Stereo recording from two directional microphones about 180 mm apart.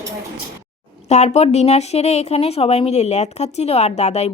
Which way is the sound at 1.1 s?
40° left (ahead or behind).